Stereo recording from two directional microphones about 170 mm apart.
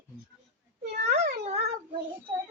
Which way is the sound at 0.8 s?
70° right (ahead or behind).